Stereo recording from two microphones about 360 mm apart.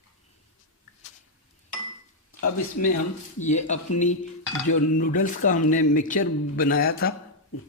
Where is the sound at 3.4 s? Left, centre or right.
Centre.